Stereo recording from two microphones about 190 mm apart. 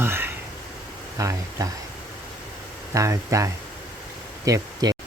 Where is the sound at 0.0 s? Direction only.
10° right (ahead or behind).